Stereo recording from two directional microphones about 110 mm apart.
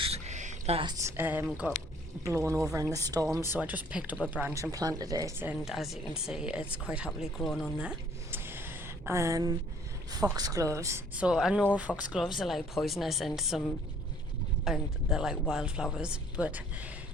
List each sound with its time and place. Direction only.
0.0 s a sound: 80° right
0.9 s speech: 25° right (ahead or behind)
2.2 s speech: 25° right (ahead or behind)
3.5 s speech: 15° right (ahead or behind)
4.5 s speech: 30° right (ahead or behind)
5.6 s speech: centre (ahead or behind)
8.3 s a sound: 20° right (ahead or behind)
10.3 s speech: 35° right (ahead or behind)
11.1 s speech: 10° right (ahead or behind)
12.4 s speech: centre (ahead or behind)
14.6 s speech: 5° right (ahead or behind)